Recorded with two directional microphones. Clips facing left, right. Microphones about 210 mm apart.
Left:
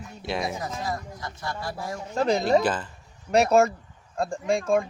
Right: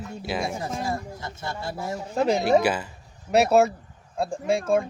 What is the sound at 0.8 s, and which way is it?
Speech, 25° right (ahead or behind).